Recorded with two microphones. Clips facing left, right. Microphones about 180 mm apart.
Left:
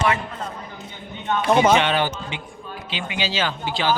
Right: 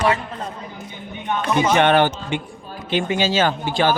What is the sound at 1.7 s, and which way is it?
Speech, 55° right (ahead or behind).